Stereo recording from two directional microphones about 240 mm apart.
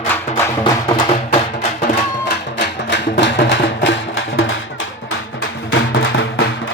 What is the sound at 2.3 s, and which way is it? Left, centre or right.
Music, left.